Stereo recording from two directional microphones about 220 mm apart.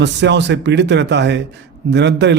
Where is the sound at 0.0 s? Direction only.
55° right (ahead or behind).